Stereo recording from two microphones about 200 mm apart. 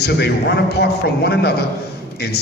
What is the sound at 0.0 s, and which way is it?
Music, 55° left (ahead or behind).